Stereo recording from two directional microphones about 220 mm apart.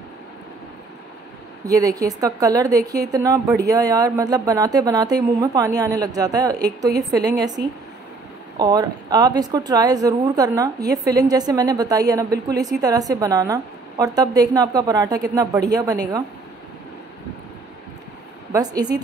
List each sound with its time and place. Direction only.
1.7 s speech: 15° right (ahead or behind)
7.6 s speech: 45° right (ahead or behind)
8.5 s speech: 20° right (ahead or behind)
18.5 s speech: 15° right (ahead or behind)